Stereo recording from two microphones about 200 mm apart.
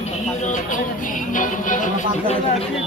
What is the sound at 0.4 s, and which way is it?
Music, 40° left (ahead or behind).